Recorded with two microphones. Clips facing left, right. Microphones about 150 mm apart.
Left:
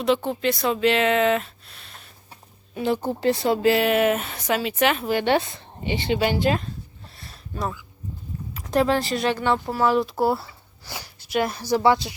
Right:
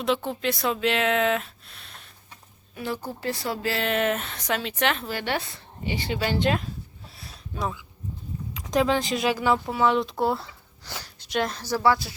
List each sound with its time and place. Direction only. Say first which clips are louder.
0.0 s speech: left 4 dB; centre (ahead or behind)
2.3 s speech: left 8 dB; 25° left (ahead or behind); by 5.0 s 5° left (ahead or behind)
5.0 s speech: left 8 dB; 20° left (ahead or behind)
6.4 s a sound: left 2 dB; centre (ahead or behind)
8.7 s speech: left 2 dB; centre (ahead or behind); by 12.1 s 20° left (ahead or behind)